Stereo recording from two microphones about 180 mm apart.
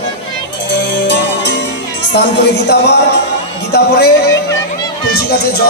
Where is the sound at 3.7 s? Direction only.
65° left (ahead or behind).